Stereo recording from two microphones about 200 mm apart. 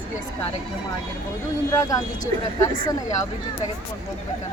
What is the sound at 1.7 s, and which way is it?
Speech, 15° left (ahead or behind).